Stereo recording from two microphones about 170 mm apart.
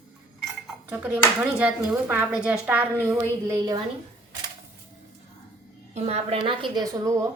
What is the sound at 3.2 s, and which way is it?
Speech, 20° right (ahead or behind).